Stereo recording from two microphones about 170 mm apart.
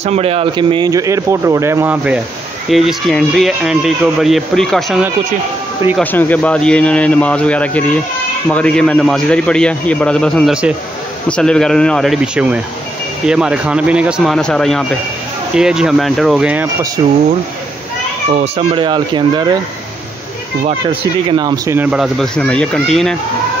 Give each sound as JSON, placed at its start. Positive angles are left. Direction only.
{"t": 0.0, "sound": "speech", "side_deg": -35}
{"t": 6.1, "sound": "speech", "side_deg": 10}
{"t": 18.8, "sound": "speech", "side_deg": -25}
{"t": 21.3, "sound": "speech", "side_deg": -25}
{"t": 21.7, "sound": "speech", "side_deg": -5}